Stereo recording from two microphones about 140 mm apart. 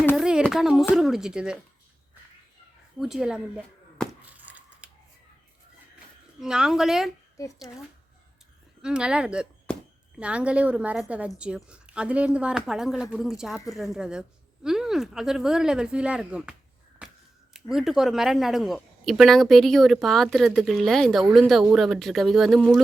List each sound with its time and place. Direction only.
0.2 s a sound: 5° right (ahead or behind)
0.5 s a woman's voice: centre (ahead or behind)
3.0 s a woman's voice: 5° right (ahead or behind)
4.3 s a sound: 10° right (ahead or behind)
6.4 s a woman's voice: 5° right (ahead or behind)
7.7 s speech: 30° left (ahead or behind)
8.8 s a woman's voice: 5° right (ahead or behind)
17.0 s a sound: 10° right (ahead or behind)
17.5 s a woman's voice: 5° right (ahead or behind)